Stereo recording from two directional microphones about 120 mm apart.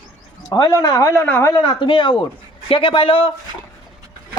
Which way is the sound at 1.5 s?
40° left (ahead or behind).